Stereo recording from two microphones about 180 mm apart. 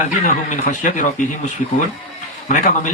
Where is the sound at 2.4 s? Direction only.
40° left (ahead or behind).